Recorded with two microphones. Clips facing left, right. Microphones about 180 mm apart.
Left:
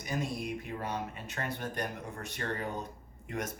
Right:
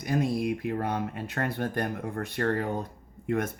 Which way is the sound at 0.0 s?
60° right (ahead or behind).